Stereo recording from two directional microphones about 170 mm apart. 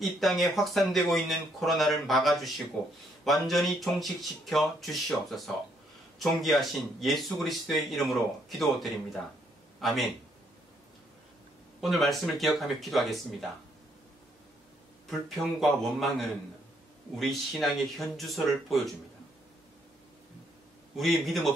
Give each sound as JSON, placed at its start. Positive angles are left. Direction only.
{"t": 0.0, "sound": "speech", "side_deg": 0}
{"t": 11.8, "sound": "speech", "side_deg": 0}
{"t": 15.0, "sound": "speech", "side_deg": 0}
{"t": 20.9, "sound": "speech", "side_deg": 0}